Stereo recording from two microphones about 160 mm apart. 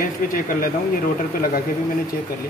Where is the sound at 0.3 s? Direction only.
60° left (ahead or behind).